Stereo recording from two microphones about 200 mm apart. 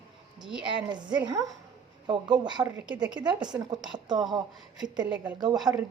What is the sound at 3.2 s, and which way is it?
Speech, 20° right (ahead or behind).